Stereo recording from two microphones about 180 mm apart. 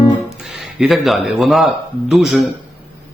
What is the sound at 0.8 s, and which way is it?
A man's voice, centre (ahead or behind).